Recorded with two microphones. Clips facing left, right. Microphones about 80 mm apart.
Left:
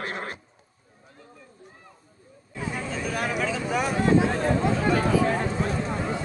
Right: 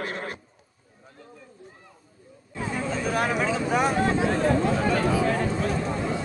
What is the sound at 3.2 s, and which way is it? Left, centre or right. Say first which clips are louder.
Vehicle: right 2 dB; right.